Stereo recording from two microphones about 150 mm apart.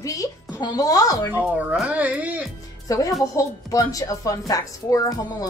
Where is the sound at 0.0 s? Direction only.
25° left (ahead or behind).